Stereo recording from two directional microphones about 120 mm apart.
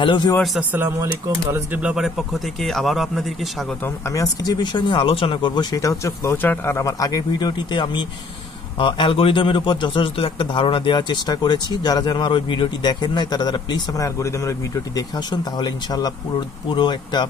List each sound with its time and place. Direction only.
0.0 s a man's voice: 45° left (ahead or behind)
0.6 s speech: 15° right (ahead or behind); by 3.3 s centre (ahead or behind)
3.8 s a man's voice: 25° left (ahead or behind)
15.0 s a man's voice: 35° left (ahead or behind)